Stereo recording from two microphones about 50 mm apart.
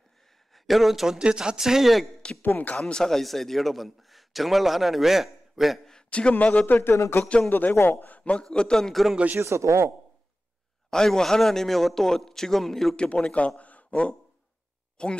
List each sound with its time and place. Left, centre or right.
0.7 s a man's voice: centre
1.1 s speech: centre
2.4 s speech: left
2.8 s a man's voice: centre
5.9 s a sound: centre
6.4 s speech: left
7.4 s speech: left
7.7 s a man's voice: left
8.2 s a man's voice: left
9.4 s speech: right
10.9 s a man's voice: centre
12.9 s speech: centre
13.6 s a sound: left
15.0 s speech: centre